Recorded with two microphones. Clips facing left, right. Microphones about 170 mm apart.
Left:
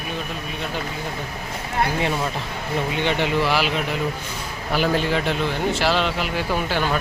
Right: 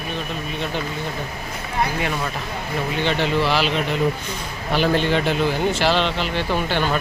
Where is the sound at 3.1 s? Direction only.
15° left (ahead or behind).